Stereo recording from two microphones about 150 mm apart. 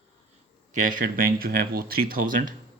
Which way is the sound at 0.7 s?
65° right (ahead or behind).